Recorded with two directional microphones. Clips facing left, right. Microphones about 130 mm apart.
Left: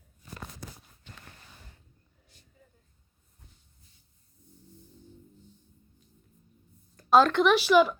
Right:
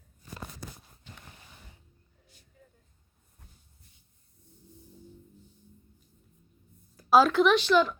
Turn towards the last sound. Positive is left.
turn(degrees=10)  # may be behind; listen again after turning